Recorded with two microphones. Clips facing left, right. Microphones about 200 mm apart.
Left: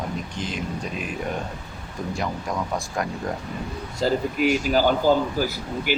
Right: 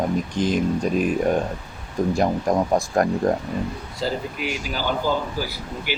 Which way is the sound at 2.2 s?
45° right (ahead or behind).